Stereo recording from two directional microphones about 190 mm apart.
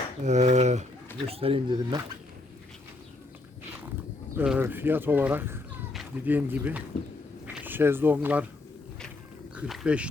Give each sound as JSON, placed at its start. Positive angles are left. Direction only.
{"t": 0.2, "sound": "speech", "side_deg": -40}
{"t": 4.4, "sound": "speech", "side_deg": -10}
{"t": 9.6, "sound": "speech", "side_deg": -5}